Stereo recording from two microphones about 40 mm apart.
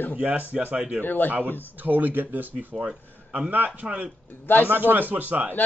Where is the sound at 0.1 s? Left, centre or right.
Right.